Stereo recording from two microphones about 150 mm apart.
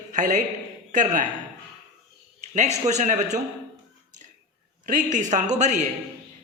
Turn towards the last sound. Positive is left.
turn(degrees=-50)  # may be behind; listen again after turning